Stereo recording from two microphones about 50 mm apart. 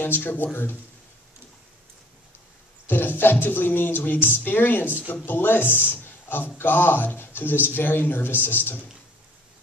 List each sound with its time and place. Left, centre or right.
0.0 s speech: left
2.9 s speech: left